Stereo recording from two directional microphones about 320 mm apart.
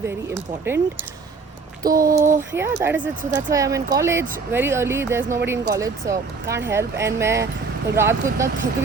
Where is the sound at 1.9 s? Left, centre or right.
Right.